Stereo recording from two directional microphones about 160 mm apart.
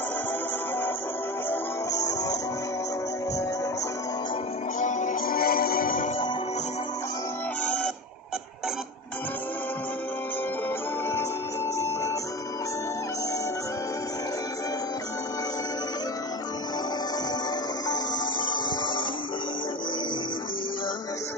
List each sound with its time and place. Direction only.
1.5 s music: 20° left (ahead or behind)
4.8 s music: 50° left (ahead or behind)
7.6 s music: 5° left (ahead or behind)
17.8 s music: 25° left (ahead or behind)